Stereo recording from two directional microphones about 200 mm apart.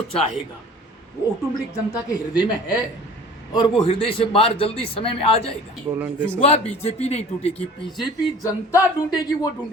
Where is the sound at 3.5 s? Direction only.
20° left (ahead or behind).